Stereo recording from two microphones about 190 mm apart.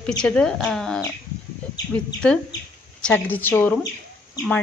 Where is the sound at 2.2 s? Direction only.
5° left (ahead or behind).